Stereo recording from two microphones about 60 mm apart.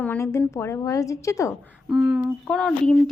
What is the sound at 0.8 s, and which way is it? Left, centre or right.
Speech, left.